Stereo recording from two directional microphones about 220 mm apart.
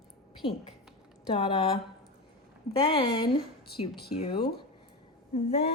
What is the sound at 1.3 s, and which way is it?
Speech, 25° left (ahead or behind).